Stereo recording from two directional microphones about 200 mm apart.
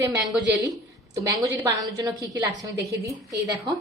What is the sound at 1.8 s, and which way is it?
A woman's voice, 20° right (ahead or behind).